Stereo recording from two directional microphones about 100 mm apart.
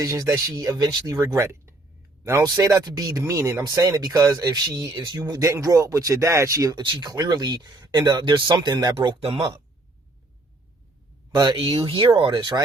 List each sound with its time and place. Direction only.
0.0 s speech: 30° right (ahead or behind); by 9.1 s 50° right (ahead or behind)
9.2 s speech: 65° right (ahead or behind)
11.3 s speech: 55° right (ahead or behind)
12.1 s speech: 50° right (ahead or behind)